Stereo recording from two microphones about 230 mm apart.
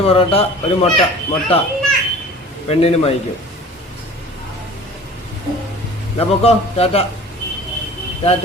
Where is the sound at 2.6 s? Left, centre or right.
Left.